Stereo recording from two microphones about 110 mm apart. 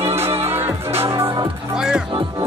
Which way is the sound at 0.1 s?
25° right (ahead or behind).